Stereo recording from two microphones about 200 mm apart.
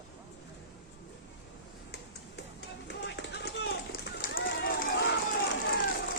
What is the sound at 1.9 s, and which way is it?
Run, 55° left (ahead or behind).